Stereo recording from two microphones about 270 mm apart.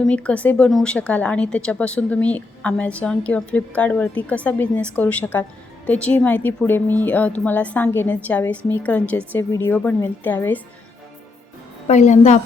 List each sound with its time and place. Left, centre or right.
0.0 s a woman's voice: centre
11.9 s a woman's voice: left